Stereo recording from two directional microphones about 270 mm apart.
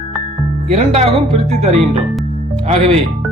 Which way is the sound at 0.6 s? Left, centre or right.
Right.